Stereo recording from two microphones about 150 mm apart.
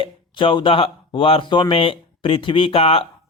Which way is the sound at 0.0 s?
35° left (ahead or behind).